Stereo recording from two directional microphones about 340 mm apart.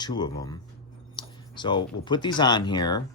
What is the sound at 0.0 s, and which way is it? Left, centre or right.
Speech, centre.